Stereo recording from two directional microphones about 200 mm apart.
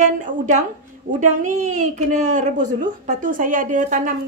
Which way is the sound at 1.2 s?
40° right (ahead or behind).